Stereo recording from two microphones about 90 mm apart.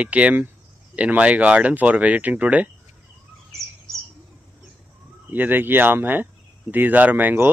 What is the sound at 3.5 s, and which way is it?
Bird, 35° right (ahead or behind).